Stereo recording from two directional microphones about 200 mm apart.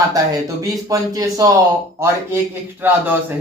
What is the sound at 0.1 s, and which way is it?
Speech, 15° right (ahead or behind).